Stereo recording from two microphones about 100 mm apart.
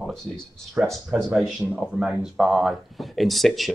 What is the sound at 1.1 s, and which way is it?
Speech, 5° right (ahead or behind).